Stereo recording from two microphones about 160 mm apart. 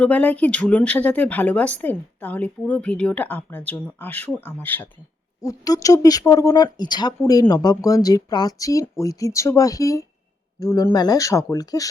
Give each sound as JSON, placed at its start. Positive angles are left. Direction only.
{"t": 0.0, "sound": "speech", "side_deg": 10}